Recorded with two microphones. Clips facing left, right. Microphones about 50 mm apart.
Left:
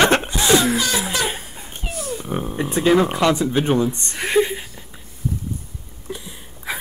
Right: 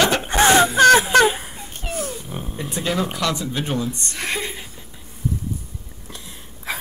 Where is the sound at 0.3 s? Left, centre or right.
Right.